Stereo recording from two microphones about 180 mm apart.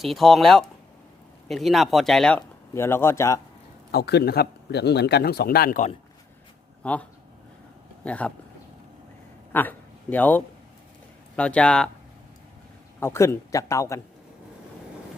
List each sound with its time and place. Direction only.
0.0 s speech: centre (ahead or behind)
2.7 s a man's voice: 15° left (ahead or behind)
3.9 s speech: 65° left (ahead or behind)
6.8 s a man's voice: 10° left (ahead or behind)
9.5 s a man's voice: 10° left (ahead or behind)
13.0 s a man's voice: 15° left (ahead or behind)